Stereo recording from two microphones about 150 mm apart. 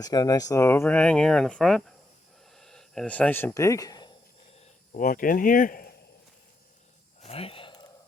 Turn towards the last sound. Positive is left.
turn(degrees=35)  # may be behind; listen again after turning